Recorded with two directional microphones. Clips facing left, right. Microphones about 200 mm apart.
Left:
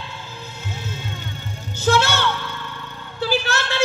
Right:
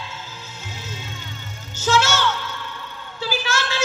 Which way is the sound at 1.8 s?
60° left (ahead or behind).